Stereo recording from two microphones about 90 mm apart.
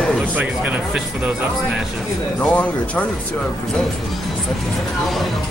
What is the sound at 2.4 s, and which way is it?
Speech, 15° left (ahead or behind).